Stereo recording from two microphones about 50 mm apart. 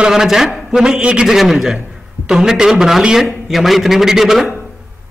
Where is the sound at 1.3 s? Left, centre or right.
Centre.